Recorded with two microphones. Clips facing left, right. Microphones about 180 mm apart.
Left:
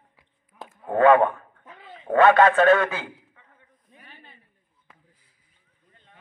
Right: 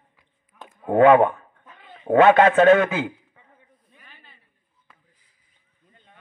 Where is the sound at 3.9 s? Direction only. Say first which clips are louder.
Left 5 dB; 40° left (ahead or behind).